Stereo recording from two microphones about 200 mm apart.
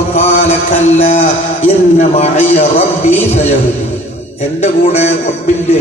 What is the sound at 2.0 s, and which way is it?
Speech, 35° left (ahead or behind).